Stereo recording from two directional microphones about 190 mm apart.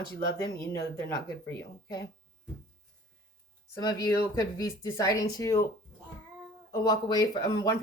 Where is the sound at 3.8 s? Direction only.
20° left (ahead or behind).